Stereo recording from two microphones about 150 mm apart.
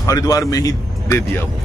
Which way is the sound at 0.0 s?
20° left (ahead or behind).